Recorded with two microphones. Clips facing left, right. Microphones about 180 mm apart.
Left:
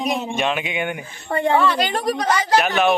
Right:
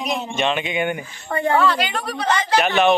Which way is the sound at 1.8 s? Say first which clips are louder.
Left 4 dB; 40° left (ahead or behind).